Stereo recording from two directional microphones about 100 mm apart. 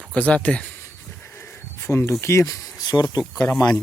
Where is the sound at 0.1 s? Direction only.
15° left (ahead or behind).